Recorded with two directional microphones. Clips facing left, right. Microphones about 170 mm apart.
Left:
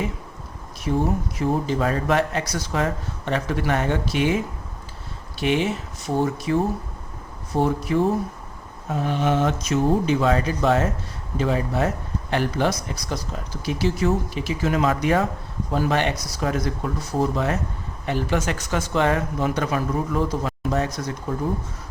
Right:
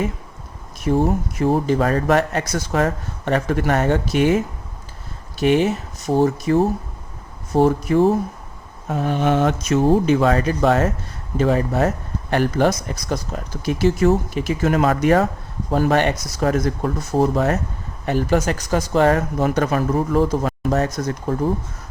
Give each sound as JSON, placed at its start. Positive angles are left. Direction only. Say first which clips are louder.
{"t": 0.9, "sound": "speech", "louder": "right 4 dB", "side_deg": -50}
{"t": 5.4, "sound": "speech", "louder": "right 5 dB", "side_deg": -45}
{"t": 9.0, "sound": "speech", "louder": "right 3 dB", "side_deg": -50}